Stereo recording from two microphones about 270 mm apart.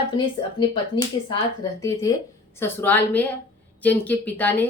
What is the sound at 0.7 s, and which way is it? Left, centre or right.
A woman's voice, centre.